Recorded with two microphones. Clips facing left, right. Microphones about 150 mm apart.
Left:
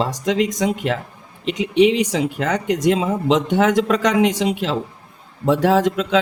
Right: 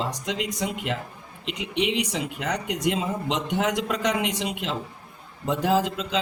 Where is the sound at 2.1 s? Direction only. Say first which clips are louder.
Left 8 dB; 90° left.